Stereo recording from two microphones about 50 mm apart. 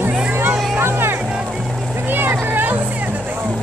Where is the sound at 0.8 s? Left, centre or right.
Right.